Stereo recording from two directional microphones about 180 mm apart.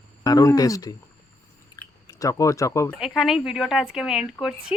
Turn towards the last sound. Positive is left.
turn(degrees=-5)  # may be behind; listen again after turning